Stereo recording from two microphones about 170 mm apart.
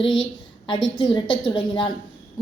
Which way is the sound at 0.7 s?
25° left (ahead or behind).